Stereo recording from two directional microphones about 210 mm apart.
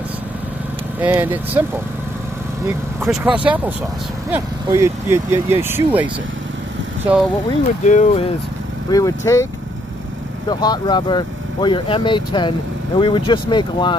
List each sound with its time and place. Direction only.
1.0 s speech: 10° right (ahead or behind)
3.0 s speech: 5° right (ahead or behind)
7.8 s speech: 35° left (ahead or behind)
8.9 s speech: 15° left (ahead or behind)
10.5 s speech: 20° left (ahead or behind)